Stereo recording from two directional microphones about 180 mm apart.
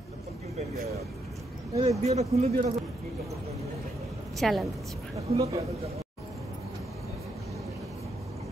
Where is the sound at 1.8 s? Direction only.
35° right (ahead or behind).